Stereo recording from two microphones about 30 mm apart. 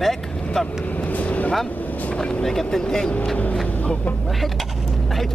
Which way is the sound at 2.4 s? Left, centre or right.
Centre.